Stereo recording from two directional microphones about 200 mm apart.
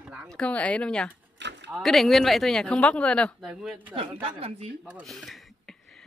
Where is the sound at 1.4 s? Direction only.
60° right (ahead or behind).